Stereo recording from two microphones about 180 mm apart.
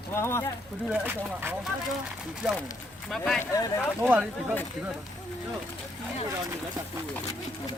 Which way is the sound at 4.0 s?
10° right (ahead or behind).